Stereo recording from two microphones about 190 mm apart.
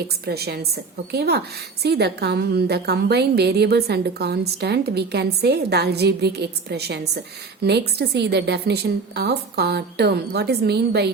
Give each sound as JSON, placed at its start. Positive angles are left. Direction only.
{"t": 0.3, "sound": "a woman's voice", "side_deg": -55}